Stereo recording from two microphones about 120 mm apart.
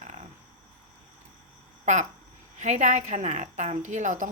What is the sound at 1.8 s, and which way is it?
Speech, 90° right.